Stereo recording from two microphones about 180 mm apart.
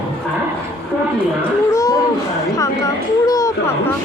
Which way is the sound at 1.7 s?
20° left (ahead or behind).